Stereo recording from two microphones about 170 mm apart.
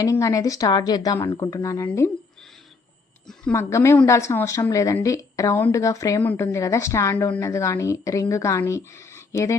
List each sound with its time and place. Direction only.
0.0 s a woman's voice: 20° left (ahead or behind)
3.5 s a woman's voice: 15° left (ahead or behind)